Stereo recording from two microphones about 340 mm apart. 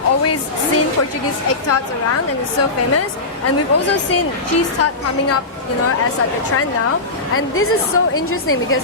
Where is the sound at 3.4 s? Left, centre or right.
Left.